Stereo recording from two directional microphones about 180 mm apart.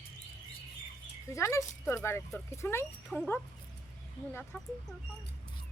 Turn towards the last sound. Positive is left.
turn(degrees=10)  # may be behind; listen again after turning